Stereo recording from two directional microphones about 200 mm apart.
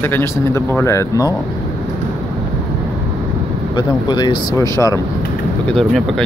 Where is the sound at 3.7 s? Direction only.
20° left (ahead or behind).